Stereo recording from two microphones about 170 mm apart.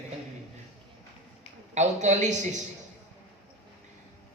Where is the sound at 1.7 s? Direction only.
45° right (ahead or behind).